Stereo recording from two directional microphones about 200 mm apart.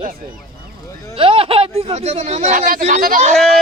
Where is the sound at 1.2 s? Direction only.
25° right (ahead or behind).